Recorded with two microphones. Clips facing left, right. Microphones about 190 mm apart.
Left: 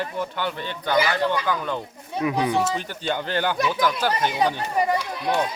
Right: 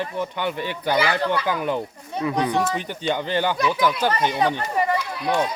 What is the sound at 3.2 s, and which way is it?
Speech, 10° right (ahead or behind).